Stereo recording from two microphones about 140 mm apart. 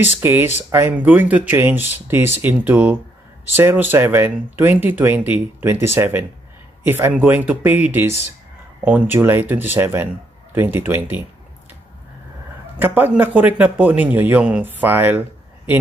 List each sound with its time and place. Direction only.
0.2 s a man's voice: 15° right (ahead or behind)
12.7 s a man's voice: 15° right (ahead or behind)